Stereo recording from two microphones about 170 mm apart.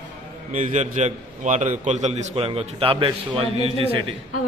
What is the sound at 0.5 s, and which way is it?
A man's voice, 45° right (ahead or behind).